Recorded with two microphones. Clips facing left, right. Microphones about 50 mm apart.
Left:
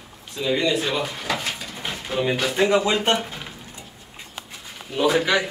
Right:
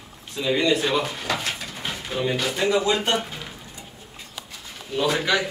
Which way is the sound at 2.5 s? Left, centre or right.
Left.